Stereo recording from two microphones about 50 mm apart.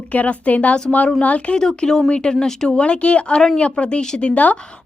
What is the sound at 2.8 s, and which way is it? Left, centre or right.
Speech, left.